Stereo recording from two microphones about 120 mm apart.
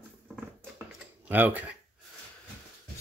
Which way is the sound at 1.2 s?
15° right (ahead or behind).